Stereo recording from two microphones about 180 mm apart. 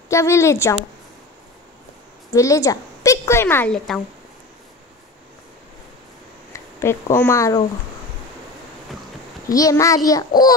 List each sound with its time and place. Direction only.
0.1 s a woman's voice: 15° left (ahead or behind)
2.3 s a woman's voice: 15° left (ahead or behind)
6.5 s speech: 15° left (ahead or behind)
9.5 s a child's voice: 20° left (ahead or behind)